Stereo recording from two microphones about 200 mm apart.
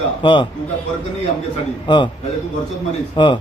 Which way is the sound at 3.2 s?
25° left (ahead or behind).